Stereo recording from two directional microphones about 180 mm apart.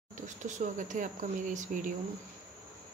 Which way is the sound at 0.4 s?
45° right (ahead or behind).